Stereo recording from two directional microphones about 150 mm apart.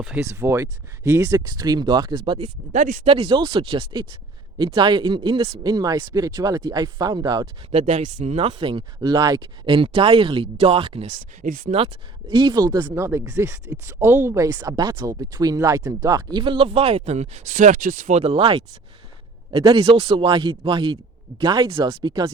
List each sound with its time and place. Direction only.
0.0 s speech: 5° right (ahead or behind)
0.3 s speech: 20° right (ahead or behind); by 2.5 s 35° right (ahead or behind)
2.7 s speech: 55° right (ahead or behind)
3.1 s speech: 35° right (ahead or behind)
5.7 s speech: 25° right (ahead or behind)
7.7 s speech: 50° right (ahead or behind)
11.4 s speech: 70° right (ahead or behind)
12.3 s speech: 30° right (ahead or behind)